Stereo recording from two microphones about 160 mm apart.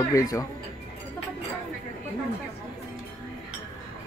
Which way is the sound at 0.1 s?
20° left (ahead or behind).